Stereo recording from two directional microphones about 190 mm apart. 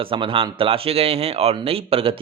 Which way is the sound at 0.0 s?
25° right (ahead or behind).